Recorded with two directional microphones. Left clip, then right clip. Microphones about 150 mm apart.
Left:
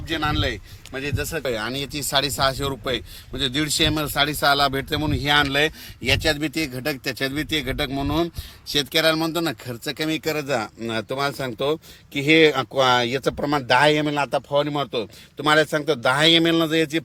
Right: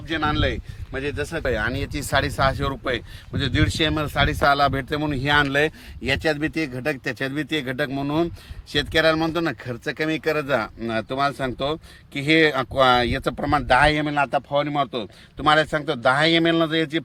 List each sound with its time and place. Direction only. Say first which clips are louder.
0.1 s speech: right 1 dB; 10° left (ahead or behind)
1.5 s speech: right 3 dB; centre (ahead or behind); by 10.4 s 15° left (ahead or behind)
10.4 s speech: right 2 dB; 30° left (ahead or behind)
10.8 s speech: right 2 dB; 50° left (ahead or behind)